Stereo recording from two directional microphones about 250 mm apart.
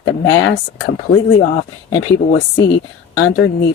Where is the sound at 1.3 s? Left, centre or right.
Left.